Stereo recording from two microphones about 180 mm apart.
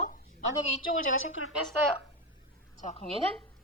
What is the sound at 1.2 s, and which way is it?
Speech, 90° left.